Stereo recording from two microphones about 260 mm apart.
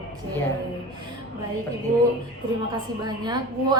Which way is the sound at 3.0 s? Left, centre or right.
Centre.